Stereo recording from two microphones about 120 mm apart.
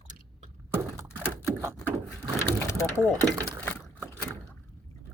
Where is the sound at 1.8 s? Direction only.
10° left (ahead or behind).